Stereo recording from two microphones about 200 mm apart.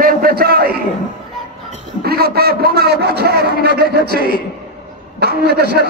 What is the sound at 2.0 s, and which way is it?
A man's voice, 50° right (ahead or behind).